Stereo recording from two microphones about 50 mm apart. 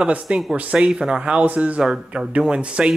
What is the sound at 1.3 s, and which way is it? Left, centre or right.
Speech, right.